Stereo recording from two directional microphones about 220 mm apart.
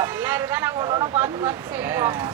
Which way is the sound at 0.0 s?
10° right (ahead or behind).